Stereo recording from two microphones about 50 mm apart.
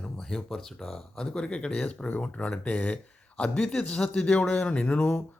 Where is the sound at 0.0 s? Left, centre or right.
Centre.